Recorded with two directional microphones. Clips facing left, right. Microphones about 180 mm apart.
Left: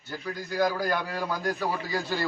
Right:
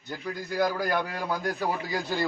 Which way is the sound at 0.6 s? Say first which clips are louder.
Even; 10° right (ahead or behind).